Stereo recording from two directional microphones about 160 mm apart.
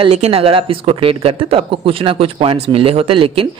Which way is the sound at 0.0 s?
40° right (ahead or behind).